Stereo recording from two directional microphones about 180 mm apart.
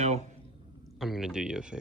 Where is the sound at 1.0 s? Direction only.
Centre (ahead or behind).